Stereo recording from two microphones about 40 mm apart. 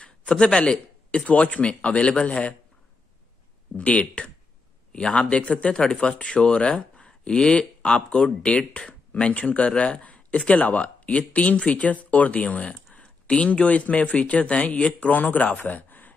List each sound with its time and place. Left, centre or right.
0.0 s a man's voice: left
3.7 s a man's voice: left
15.1 s speech: left